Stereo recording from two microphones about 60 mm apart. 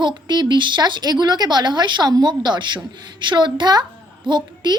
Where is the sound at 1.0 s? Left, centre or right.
Right.